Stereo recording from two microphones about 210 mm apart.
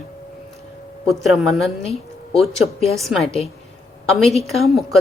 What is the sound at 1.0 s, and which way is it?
Speech, centre (ahead or behind).